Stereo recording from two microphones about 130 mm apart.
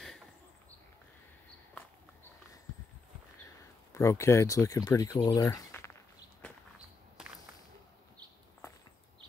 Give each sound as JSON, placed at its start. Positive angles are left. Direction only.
{"t": 3.9, "sound": "speech", "side_deg": 20}